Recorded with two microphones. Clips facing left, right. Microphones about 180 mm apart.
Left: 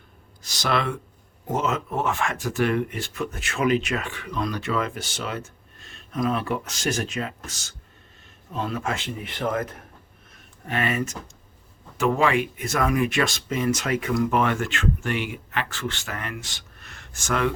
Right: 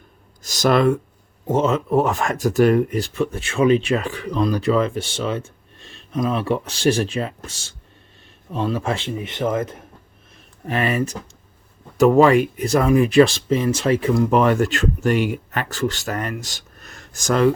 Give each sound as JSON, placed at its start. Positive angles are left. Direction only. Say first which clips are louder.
{"t": 0.4, "sound": "speech", "louder": "right 9 dB", "side_deg": -45}
{"t": 1.5, "sound": "speech", "louder": "right 7 dB", "side_deg": -30}
{"t": 10.7, "sound": "speech", "louder": "right 5 dB", "side_deg": -35}